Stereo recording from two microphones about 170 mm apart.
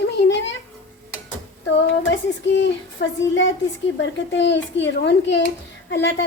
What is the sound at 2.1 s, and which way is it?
A woman's voice, 90° left.